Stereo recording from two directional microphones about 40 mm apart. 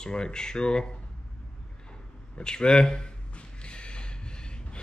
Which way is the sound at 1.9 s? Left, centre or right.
Left.